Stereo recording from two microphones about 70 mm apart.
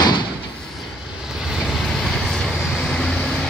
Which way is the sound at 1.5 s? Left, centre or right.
Centre.